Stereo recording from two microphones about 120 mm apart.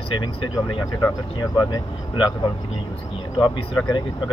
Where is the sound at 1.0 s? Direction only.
30° left (ahead or behind).